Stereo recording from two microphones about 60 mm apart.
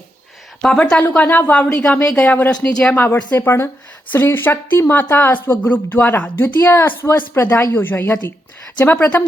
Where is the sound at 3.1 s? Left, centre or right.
Left.